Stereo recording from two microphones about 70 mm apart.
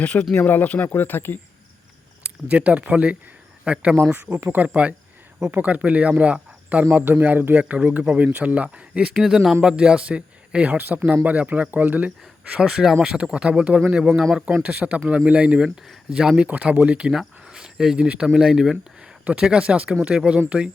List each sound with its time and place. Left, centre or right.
0.0 s speech: centre
2.2 s speech: centre
6.9 s speech: right
7.6 s speech: centre
12.6 s speech: centre